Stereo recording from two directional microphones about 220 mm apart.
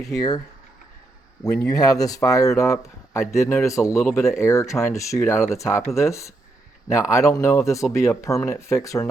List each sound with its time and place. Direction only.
0.0 s speech: 15° left (ahead or behind)
1.6 s speech: 15° left (ahead or behind)